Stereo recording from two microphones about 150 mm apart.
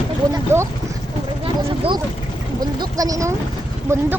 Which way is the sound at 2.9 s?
25° right (ahead or behind).